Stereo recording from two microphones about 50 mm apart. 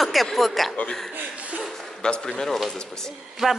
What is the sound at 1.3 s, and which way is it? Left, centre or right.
Chuckle, right.